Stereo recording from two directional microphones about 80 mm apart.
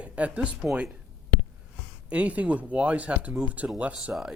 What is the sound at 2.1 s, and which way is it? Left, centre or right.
Speech, centre.